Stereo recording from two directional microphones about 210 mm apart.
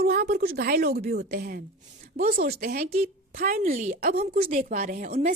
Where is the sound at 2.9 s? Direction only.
30° right (ahead or behind).